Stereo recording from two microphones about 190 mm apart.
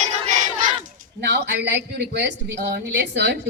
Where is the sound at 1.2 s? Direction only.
60° right (ahead or behind).